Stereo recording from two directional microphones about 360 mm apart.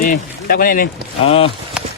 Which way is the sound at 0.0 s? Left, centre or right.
Left.